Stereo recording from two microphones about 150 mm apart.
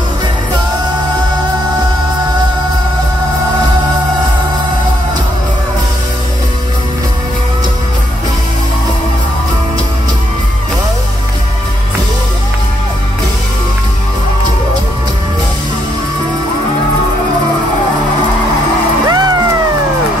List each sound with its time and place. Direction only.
19.0 s music: 25° right (ahead or behind)